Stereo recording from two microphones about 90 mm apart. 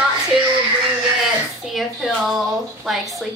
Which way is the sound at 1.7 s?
Centre (ahead or behind).